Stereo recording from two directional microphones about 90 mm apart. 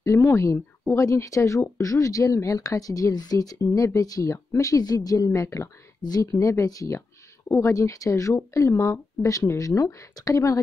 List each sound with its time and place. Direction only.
0.0 s speech: 35° left (ahead or behind)